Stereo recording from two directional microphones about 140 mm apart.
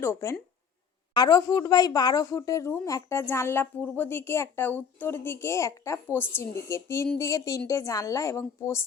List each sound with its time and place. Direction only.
0.0 s a woman's voice: 15° left (ahead or behind)